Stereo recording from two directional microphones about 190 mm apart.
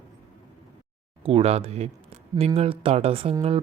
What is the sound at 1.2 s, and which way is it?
Speech, 30° right (ahead or behind).